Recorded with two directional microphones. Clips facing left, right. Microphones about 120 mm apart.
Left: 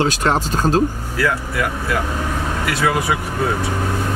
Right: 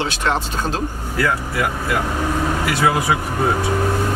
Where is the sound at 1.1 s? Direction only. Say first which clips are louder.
Right 1 dB; centre (ahead or behind).